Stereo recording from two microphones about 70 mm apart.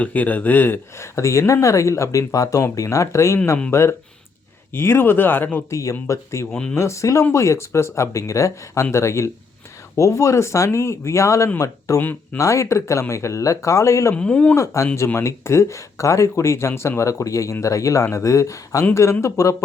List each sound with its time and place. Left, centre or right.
0.0 s speech: left
5.7 s speech: left
11.9 s speech: left
12.4 s speech: left
14.2 s speech: centre
14.5 s speech: left